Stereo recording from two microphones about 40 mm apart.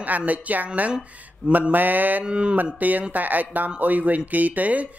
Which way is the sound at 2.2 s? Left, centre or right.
Right.